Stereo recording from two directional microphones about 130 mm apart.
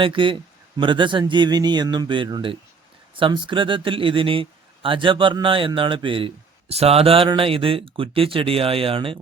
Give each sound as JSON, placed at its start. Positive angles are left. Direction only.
{"t": 0.0, "sound": "speech", "side_deg": -40}